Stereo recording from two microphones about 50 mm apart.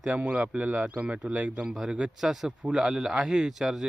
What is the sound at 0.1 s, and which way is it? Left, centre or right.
Speech, right.